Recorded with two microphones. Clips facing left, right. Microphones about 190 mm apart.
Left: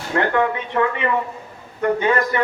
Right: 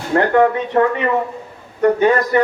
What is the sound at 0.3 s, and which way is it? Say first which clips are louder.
A man's voice: right 6 dB; 45° right (ahead or behind).